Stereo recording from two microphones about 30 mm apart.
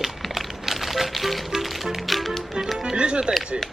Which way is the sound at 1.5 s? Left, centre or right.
Centre.